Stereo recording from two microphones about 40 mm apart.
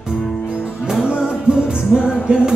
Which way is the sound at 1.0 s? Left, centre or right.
Right.